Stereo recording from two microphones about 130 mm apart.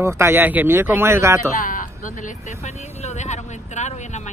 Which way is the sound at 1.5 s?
90° left.